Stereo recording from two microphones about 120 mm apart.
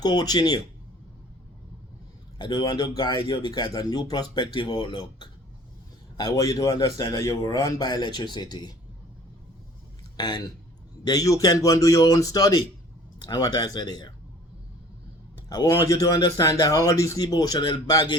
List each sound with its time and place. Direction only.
0.0 s a man's voice: 35° left (ahead or behind)
2.4 s a man's voice: 35° left (ahead or behind)
6.1 s a man's voice: 30° left (ahead or behind)
10.2 s a man's voice: 35° left (ahead or behind)
15.4 s a man's voice: 30° left (ahead or behind)